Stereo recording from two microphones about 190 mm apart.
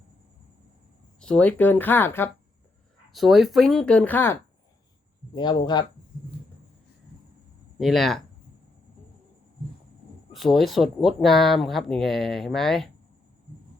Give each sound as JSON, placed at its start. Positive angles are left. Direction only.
{"t": 1.2, "sound": "speech", "side_deg": 5}
{"t": 3.1, "sound": "speech", "side_deg": 0}
{"t": 5.3, "sound": "speech", "side_deg": 25}
{"t": 7.8, "sound": "speech", "side_deg": 0}
{"t": 10.3, "sound": "speech", "side_deg": 0}